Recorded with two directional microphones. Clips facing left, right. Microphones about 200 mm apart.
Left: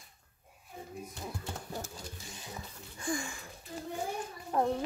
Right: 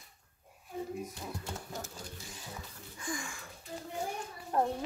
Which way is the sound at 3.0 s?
30° left (ahead or behind).